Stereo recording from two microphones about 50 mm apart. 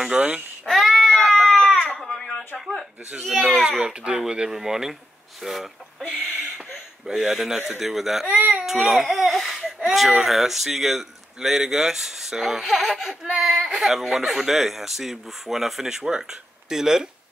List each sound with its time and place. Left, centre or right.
0.2 s speech: centre
0.7 s baby cry: centre
2.0 s a sound: centre
3.3 s speech: centre
3.6 s speech: centre
6.0 s speech: centre
7.1 s speech: centre
8.3 s baby cry: right
8.6 s baby cry: centre
9.8 s speech: centre